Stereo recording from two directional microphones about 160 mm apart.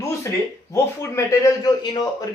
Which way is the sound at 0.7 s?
20° left (ahead or behind).